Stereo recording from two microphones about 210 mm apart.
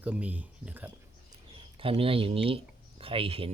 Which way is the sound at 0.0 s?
5° right (ahead or behind).